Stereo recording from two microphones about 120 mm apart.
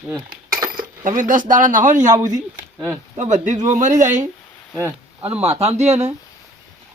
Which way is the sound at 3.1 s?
85° right.